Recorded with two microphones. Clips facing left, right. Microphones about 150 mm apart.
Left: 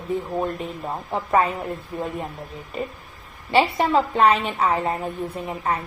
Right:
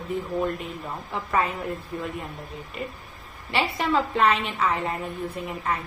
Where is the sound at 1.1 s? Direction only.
30° left (ahead or behind).